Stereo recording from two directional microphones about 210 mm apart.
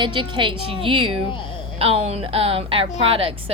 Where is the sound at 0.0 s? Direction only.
25° right (ahead or behind).